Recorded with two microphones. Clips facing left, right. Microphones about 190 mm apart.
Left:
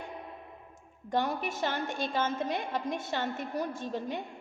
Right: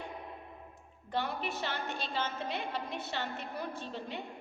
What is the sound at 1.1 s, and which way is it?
A woman's voice, 45° left (ahead or behind).